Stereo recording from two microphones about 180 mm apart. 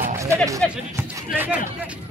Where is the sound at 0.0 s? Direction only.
15° right (ahead or behind).